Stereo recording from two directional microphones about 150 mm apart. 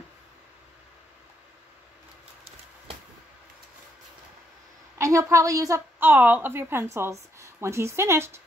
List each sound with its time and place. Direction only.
4.9 s a woman's voice: 20° right (ahead or behind)